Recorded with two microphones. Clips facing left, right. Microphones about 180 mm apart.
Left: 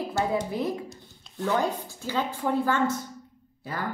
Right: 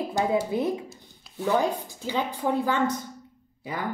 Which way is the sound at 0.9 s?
10° right (ahead or behind).